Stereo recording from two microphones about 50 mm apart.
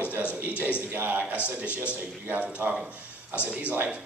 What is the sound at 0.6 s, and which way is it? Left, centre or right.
Speech, left.